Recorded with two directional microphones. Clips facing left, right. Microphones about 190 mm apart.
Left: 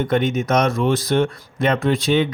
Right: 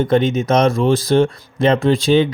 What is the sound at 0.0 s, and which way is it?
Speech, 30° right (ahead or behind).